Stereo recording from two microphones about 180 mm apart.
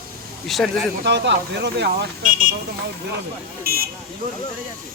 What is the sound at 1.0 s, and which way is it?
Speech, 70° right (ahead or behind).